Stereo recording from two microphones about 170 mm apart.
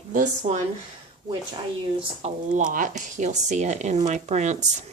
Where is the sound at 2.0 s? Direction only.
40° right (ahead or behind).